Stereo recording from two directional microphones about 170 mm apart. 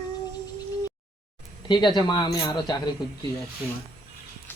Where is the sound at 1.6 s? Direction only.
25° left (ahead or behind).